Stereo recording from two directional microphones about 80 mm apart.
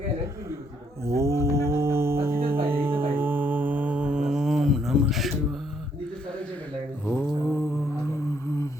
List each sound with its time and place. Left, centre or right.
1.0 s music: right; by 5.3 s centre
7.0 s mantra: left